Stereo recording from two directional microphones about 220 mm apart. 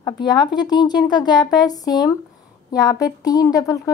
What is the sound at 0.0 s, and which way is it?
Speech, 20° left (ahead or behind).